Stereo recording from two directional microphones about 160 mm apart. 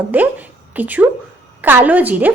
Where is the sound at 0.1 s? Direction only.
10° right (ahead or behind).